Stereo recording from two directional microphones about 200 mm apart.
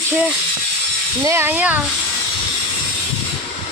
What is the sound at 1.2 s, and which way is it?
Speech, 15° right (ahead or behind).